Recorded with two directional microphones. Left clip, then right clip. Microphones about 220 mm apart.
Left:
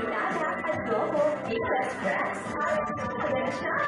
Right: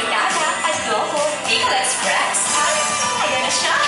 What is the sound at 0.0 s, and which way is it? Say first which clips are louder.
Music: right 10 dB; 10° left (ahead or behind).